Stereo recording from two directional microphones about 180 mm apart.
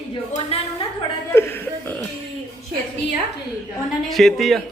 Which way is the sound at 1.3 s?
15° left (ahead or behind).